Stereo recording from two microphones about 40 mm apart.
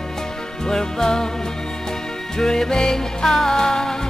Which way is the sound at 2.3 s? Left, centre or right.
Centre.